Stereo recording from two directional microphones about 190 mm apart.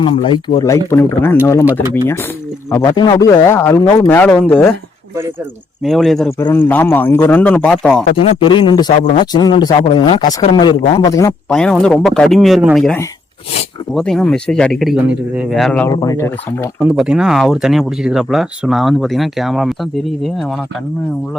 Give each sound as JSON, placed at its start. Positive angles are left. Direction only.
{"t": 0.0, "sound": "speech", "side_deg": 30}
{"t": 2.6, "sound": "a man's voice", "side_deg": 15}
{"t": 5.8, "sound": "a man's voice", "side_deg": 0}
{"t": 8.1, "sound": "speech", "side_deg": 25}
{"t": 11.4, "sound": "speech", "side_deg": 5}
{"t": 15.9, "sound": "a man's voice", "side_deg": 20}
{"t": 16.8, "sound": "speech", "side_deg": -5}